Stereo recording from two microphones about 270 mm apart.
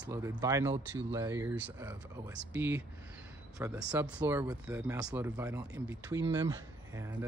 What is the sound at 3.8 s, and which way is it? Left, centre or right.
Speech, centre.